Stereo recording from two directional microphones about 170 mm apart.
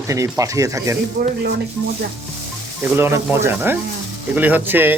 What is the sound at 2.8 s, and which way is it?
Speech, 15° right (ahead or behind).